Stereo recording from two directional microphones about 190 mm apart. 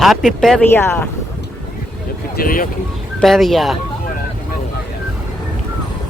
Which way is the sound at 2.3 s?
50° left (ahead or behind).